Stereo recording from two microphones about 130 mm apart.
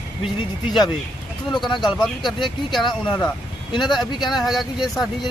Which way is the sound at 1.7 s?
35° left (ahead or behind).